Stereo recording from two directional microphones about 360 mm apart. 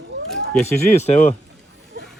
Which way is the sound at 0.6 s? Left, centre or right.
Centre.